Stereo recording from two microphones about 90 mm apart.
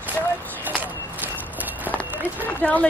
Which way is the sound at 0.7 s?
20° right (ahead or behind).